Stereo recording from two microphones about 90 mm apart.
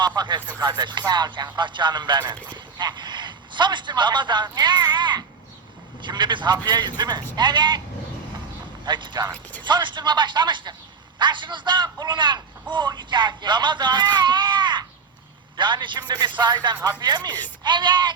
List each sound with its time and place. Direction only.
0.2 s speech: 55° right (ahead or behind)
8.8 s speech: 60° right (ahead or behind)